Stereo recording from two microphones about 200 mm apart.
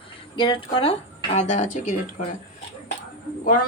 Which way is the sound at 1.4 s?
35° left (ahead or behind).